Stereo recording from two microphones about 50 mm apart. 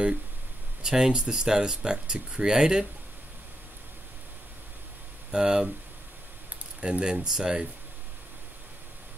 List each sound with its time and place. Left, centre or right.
0.8 s speech: centre
5.3 s speech: centre
6.8 s speech: centre